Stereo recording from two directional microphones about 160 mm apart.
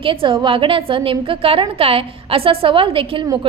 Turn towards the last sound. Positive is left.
turn(degrees=-35)  # may be behind; listen again after turning